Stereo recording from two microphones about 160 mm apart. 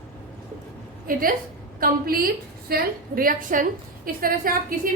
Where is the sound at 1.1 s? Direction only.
60° right (ahead or behind).